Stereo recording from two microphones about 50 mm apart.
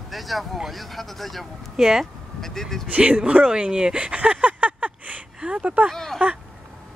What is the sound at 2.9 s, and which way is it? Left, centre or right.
Speech, right.